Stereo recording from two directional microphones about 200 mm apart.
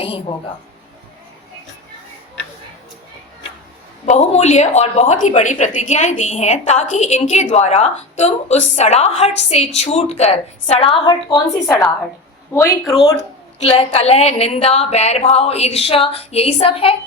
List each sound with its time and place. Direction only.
0.0 s a woman's voice: 25° left (ahead or behind)
4.0 s a woman's voice: 35° left (ahead or behind)
11.6 s a woman's voice: 10° left (ahead or behind)
13.6 s a woman's voice: 30° left (ahead or behind)